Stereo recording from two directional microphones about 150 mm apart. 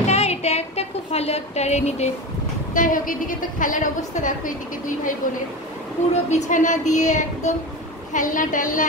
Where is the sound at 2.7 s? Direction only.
65° left (ahead or behind).